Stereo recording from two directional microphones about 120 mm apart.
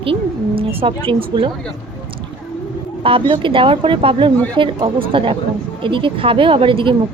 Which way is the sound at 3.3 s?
45° right (ahead or behind).